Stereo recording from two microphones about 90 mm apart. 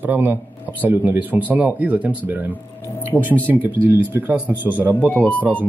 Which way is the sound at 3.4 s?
20° right (ahead or behind).